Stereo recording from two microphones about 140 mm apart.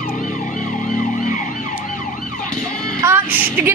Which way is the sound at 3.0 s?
15° right (ahead or behind).